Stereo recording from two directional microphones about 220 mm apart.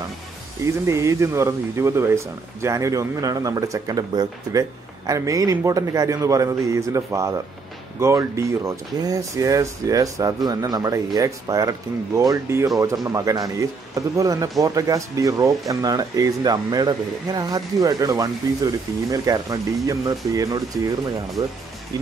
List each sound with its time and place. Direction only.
0.7 s speech: 15° right (ahead or behind)